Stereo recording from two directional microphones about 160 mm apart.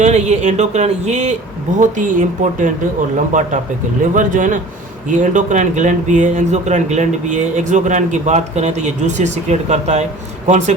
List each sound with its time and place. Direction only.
0.0 s speech: 45° right (ahead or behind)